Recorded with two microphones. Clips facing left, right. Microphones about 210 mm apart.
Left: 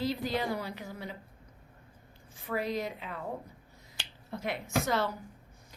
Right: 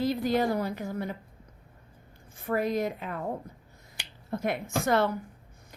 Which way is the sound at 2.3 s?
50° right (ahead or behind).